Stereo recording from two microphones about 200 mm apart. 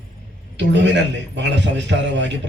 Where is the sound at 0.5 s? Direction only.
65° right (ahead or behind).